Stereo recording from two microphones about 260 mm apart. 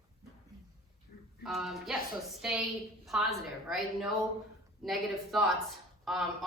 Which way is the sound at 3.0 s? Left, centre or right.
Centre.